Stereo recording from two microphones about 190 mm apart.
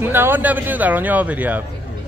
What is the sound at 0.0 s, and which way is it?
Speech, 10° right (ahead or behind).